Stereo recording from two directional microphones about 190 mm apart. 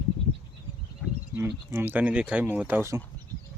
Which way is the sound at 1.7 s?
10° right (ahead or behind).